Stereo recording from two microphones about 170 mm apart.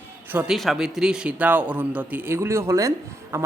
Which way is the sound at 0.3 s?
10° right (ahead or behind).